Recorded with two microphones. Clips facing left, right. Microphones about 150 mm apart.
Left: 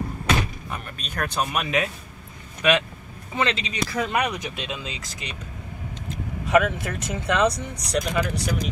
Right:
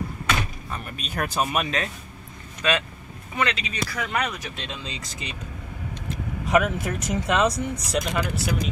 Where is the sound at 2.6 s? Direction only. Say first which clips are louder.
Left 4 dB; 15° left (ahead or behind).